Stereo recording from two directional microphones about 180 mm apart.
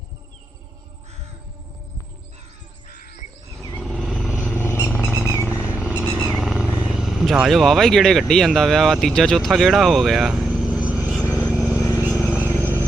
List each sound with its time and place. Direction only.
3.8 s vehicle: centre (ahead or behind)
4.5 s vehicle: 15° left (ahead or behind)
5.8 s vehicle: 5° right (ahead or behind)
6.1 s vehicle: 15° left (ahead or behind)
6.3 s speech: centre (ahead or behind)
11.2 s vehicle: 15° left (ahead or behind)
11.5 s vehicle: 10° right (ahead or behind)
11.8 s vehicle: 15° left (ahead or behind)
12.3 s vehicle: 10° right (ahead or behind)